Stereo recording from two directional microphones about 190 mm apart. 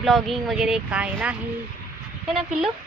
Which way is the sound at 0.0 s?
Centre (ahead or behind).